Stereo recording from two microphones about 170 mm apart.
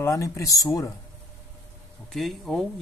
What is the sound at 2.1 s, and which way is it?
Speech, centre (ahead or behind).